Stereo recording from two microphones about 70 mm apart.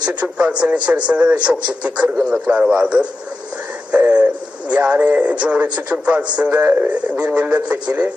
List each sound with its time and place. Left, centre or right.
0.0 s a man's voice: centre